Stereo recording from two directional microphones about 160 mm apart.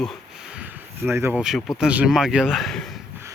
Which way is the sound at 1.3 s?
5° right (ahead or behind).